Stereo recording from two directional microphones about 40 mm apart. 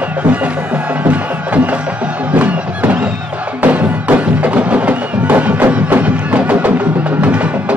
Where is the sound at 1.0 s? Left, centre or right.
Right.